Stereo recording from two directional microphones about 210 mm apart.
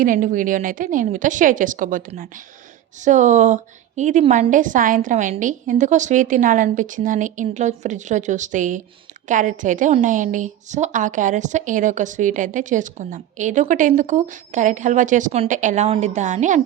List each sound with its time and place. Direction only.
0.0 s a woman's voice: 40° right (ahead or behind)